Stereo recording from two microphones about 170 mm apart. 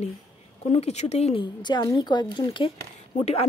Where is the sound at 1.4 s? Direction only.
25° left (ahead or behind).